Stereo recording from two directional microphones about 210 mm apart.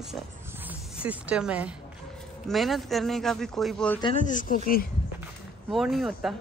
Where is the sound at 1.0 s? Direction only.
5° right (ahead or behind).